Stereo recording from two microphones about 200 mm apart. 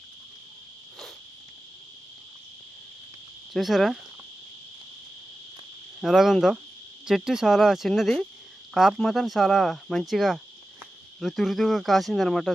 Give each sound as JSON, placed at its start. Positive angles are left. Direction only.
{"t": 3.5, "sound": "speech", "side_deg": 0}
{"t": 6.0, "sound": "speech", "side_deg": 0}